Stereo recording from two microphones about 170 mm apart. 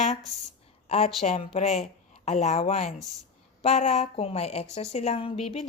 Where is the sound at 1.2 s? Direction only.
35° left (ahead or behind).